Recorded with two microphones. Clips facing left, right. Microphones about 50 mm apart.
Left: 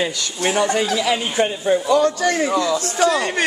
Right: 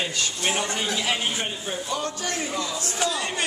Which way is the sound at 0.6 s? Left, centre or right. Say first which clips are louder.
Left 8 dB; left.